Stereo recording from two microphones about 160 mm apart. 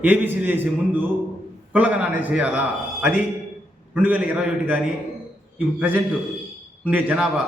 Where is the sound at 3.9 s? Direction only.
5° right (ahead or behind).